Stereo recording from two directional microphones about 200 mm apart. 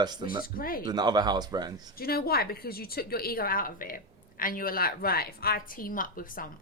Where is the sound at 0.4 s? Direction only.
45° left (ahead or behind).